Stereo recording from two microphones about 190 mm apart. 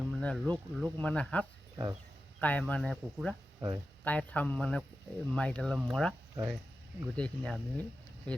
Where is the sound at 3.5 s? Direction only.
20° right (ahead or behind).